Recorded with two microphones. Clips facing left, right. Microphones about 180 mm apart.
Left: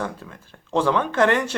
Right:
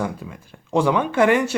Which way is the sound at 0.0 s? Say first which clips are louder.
Right 3 dB; 10° right (ahead or behind).